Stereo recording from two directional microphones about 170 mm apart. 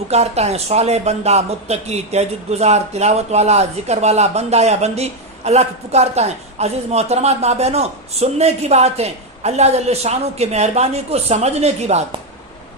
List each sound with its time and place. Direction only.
0.1 s speech: 40° right (ahead or behind)